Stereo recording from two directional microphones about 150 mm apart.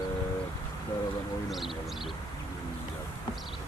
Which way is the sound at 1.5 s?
Centre (ahead or behind).